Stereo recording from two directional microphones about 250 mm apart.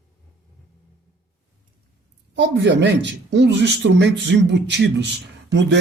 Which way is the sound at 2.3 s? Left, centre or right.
Right.